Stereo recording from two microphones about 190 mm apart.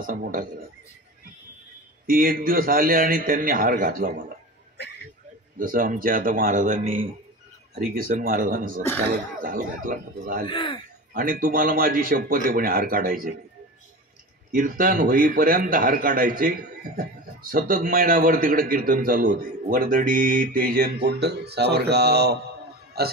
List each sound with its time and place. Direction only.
0.0 s a man's voice: 50° right (ahead or behind)
2.0 s a man's voice: 50° right (ahead or behind)
5.6 s a man's voice: 45° right (ahead or behind)
10.5 s speech: 25° left (ahead or behind)
11.1 s a man's voice: 45° right (ahead or behind)
14.5 s a man's voice: 50° right (ahead or behind)